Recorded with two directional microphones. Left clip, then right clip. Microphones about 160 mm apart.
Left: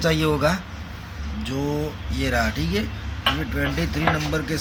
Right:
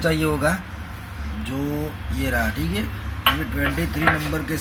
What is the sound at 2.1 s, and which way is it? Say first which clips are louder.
Speech: left 1 dB; 15° left (ahead or behind).